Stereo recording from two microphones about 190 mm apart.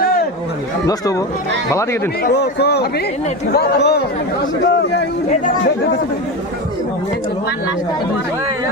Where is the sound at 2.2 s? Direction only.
60° left (ahead or behind).